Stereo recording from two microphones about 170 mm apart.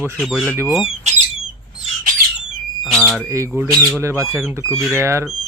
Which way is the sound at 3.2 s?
15° right (ahead or behind).